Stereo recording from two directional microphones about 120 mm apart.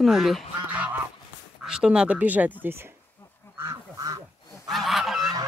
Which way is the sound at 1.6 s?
5° right (ahead or behind).